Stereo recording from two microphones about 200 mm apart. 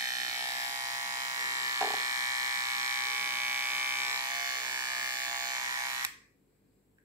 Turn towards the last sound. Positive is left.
turn(degrees=-15)  # may be behind; listen again after turning